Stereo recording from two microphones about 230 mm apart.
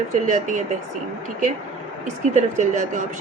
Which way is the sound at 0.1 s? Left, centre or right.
Right.